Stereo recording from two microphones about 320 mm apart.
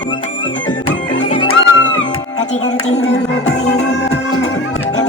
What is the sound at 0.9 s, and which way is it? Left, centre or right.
Music, centre.